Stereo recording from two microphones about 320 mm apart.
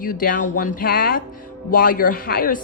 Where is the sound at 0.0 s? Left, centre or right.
Left.